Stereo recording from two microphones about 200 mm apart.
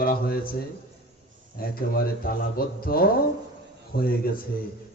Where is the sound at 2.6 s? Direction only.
50° left (ahead or behind).